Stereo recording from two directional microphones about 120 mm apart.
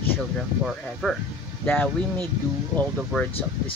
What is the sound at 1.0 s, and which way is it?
Speech, 5° left (ahead or behind).